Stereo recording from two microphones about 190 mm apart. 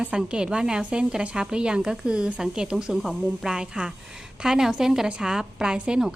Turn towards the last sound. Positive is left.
turn(degrees=-5)  # may be behind; listen again after turning